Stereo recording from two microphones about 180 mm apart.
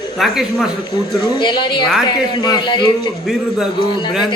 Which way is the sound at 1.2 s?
25° left (ahead or behind).